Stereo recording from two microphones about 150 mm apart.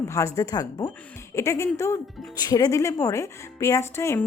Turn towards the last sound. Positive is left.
turn(degrees=20)  # may be behind; listen again after turning